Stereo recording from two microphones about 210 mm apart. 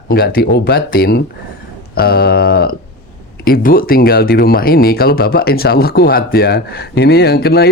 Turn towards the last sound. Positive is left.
turn(degrees=50)  # may be behind; listen again after turning